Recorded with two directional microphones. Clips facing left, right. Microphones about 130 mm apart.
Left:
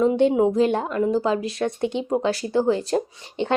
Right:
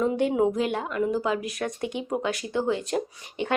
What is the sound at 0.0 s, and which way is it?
A woman's voice, 25° left (ahead or behind).